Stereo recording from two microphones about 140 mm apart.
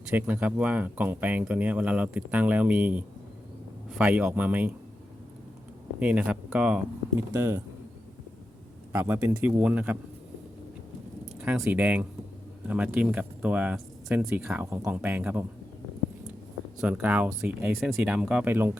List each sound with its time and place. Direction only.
0.1 s speech: 10° right (ahead or behind)
6.0 s speech: 10° right (ahead or behind)
8.9 s speech: 20° right (ahead or behind)
11.4 s speech: 10° right (ahead or behind)
16.8 s speech: 10° right (ahead or behind)